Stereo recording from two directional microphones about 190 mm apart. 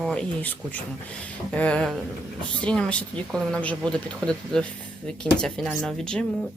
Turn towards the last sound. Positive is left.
turn(degrees=5)  # may be behind; listen again after turning